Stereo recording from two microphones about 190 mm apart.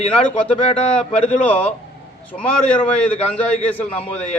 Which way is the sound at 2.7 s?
5° left (ahead or behind).